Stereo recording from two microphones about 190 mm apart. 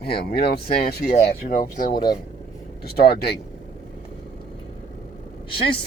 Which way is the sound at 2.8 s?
55° left (ahead or behind).